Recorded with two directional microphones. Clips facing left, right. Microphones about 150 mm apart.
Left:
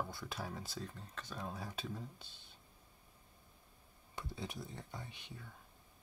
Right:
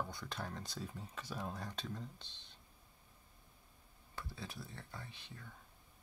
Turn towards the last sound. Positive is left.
turn(degrees=15)  # may be behind; listen again after turning